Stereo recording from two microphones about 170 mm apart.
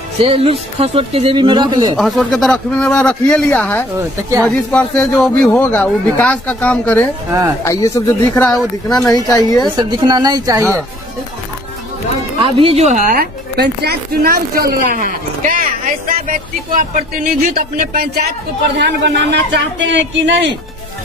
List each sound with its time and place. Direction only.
0.2 s speech: 35° right (ahead or behind)
2.0 s a man's voice: centre (ahead or behind)
7.2 s a woman's voice: 20° right (ahead or behind)
7.6 s a man's voice: 15° left (ahead or behind)
9.0 s speech: 20° left (ahead or behind)
9.8 s a woman's voice: 25° right (ahead or behind)
12.4 s speech: 30° right (ahead or behind); by 18.2 s 65° right (ahead or behind)
18.8 s a man's voice: 85° right